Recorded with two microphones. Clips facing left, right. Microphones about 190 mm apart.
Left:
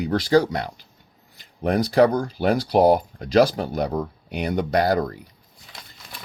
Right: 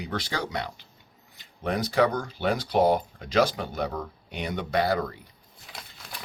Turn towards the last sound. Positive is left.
turn(degrees=40)  # may be behind; listen again after turning